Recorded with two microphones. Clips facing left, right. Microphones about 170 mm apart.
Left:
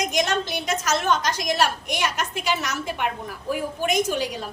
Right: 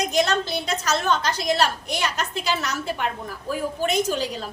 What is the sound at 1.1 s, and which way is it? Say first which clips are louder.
Speech: even; 15° left (ahead or behind).